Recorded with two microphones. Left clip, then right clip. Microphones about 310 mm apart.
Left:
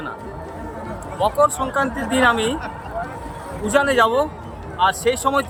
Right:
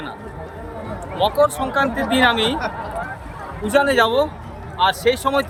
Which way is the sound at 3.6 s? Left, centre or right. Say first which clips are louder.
Even; centre.